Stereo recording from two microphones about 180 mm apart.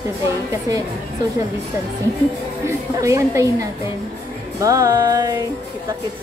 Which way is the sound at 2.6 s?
15° right (ahead or behind).